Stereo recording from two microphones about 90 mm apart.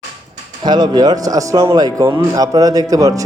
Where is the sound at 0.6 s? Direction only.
50° right (ahead or behind).